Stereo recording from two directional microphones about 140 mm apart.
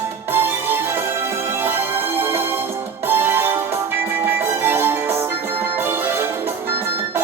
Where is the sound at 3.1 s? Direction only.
15° right (ahead or behind).